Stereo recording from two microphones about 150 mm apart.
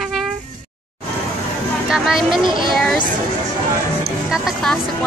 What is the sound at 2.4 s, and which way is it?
Speech, 30° right (ahead or behind).